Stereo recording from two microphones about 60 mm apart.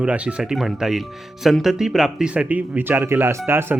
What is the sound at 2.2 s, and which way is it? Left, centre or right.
Speech, right.